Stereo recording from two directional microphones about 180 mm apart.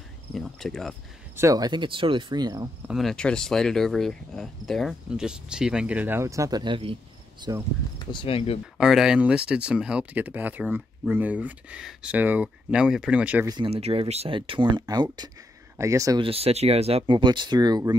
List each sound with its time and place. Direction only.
0.3 s speech: centre (ahead or behind)
1.3 s speech: 15° right (ahead or behind)
2.9 s speech: centre (ahead or behind); by 7.6 s 20° right (ahead or behind)
8.1 s speech: 30° left (ahead or behind)
8.7 s speech: 5° right (ahead or behind)
13.5 s speech: 30° right (ahead or behind)
16.2 s speech: 35° right (ahead or behind)